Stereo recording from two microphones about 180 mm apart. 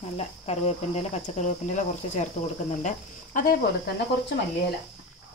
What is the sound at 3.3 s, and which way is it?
Speech, 45° left (ahead or behind).